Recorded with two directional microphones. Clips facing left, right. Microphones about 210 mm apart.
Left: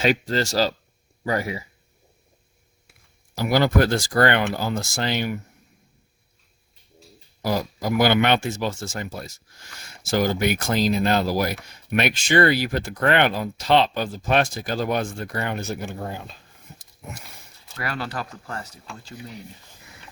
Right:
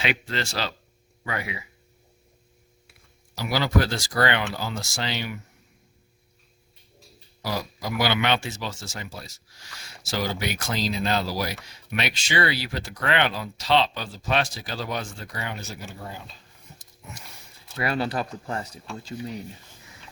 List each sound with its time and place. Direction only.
0.0 s speech: 40° left (ahead or behind)
3.3 s speech: 50° left (ahead or behind)
7.4 s speech: 50° left (ahead or behind)
17.7 s speech: 20° right (ahead or behind)